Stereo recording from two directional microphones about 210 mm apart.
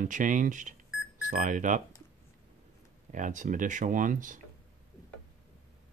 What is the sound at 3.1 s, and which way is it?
Speech, 35° right (ahead or behind).